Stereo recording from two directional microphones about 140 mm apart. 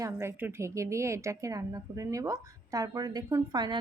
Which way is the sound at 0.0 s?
20° right (ahead or behind).